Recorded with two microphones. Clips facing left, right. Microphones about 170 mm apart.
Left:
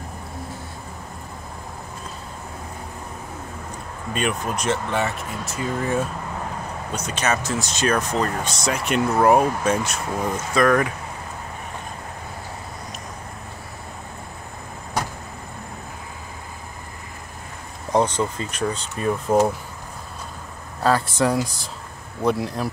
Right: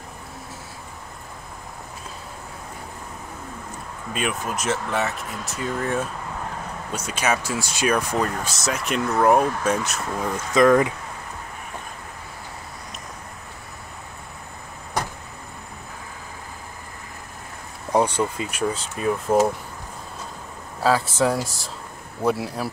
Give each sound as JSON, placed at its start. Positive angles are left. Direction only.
{"t": 4.1, "sound": "speech", "side_deg": -5}
{"t": 10.5, "sound": "speech", "side_deg": -20}
{"t": 17.9, "sound": "speech", "side_deg": -10}
{"t": 20.8, "sound": "speech", "side_deg": -5}